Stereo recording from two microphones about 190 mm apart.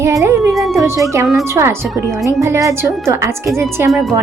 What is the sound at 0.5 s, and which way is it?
Speech, centre (ahead or behind).